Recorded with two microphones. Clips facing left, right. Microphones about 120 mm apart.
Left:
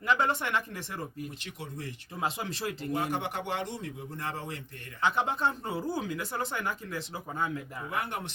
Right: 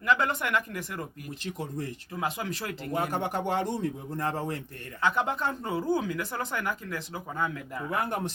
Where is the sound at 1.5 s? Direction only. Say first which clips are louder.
Right 6 dB; 40° right (ahead or behind).